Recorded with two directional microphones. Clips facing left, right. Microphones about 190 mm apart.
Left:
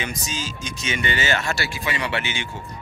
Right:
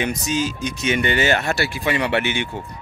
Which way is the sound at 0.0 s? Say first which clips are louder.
Right 8 dB; 65° right (ahead or behind).